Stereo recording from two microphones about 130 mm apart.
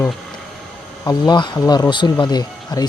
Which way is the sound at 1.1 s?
35° left (ahead or behind).